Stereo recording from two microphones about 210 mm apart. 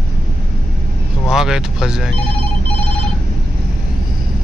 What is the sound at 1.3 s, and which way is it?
Speech, centre (ahead or behind).